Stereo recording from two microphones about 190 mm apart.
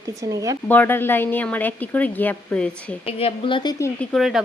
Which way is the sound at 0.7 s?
10° left (ahead or behind).